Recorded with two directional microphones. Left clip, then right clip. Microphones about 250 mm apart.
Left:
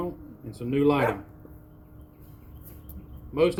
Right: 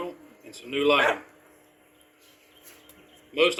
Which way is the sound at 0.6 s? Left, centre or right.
Centre.